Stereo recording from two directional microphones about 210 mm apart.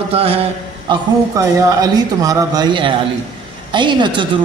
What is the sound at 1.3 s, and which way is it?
A man's voice, 15° right (ahead or behind).